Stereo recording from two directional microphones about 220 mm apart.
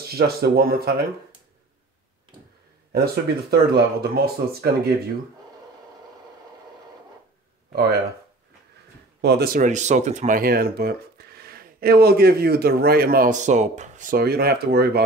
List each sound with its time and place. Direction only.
0.1 s speech: 45° right (ahead or behind)
2.9 s speech: 45° right (ahead or behind)
9.2 s speech: 45° right (ahead or behind)